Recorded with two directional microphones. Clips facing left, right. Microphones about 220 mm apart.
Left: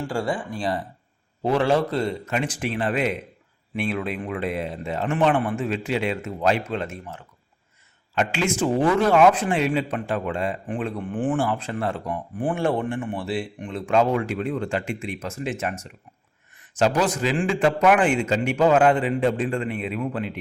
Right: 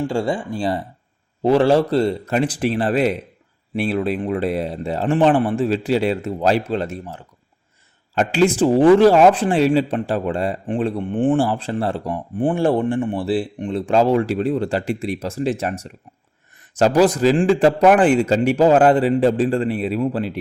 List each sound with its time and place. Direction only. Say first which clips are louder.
0.1 s speech: right 5 dB; 25° right (ahead or behind)